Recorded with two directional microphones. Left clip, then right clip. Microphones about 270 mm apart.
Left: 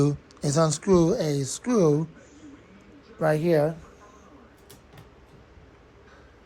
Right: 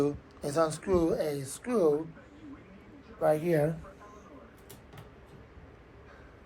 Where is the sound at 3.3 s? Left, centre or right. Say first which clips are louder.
Left 6 dB; left.